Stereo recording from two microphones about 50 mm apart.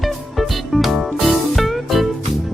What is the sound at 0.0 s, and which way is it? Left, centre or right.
Music, centre.